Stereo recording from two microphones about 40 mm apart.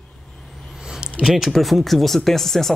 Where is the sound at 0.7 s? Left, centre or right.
Centre.